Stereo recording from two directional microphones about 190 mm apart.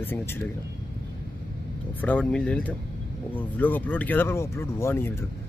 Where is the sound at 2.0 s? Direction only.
10° left (ahead or behind).